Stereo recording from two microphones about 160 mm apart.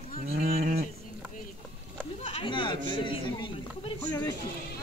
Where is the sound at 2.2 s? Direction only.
35° left (ahead or behind).